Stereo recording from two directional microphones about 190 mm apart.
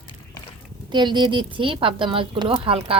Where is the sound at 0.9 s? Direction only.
25° right (ahead or behind).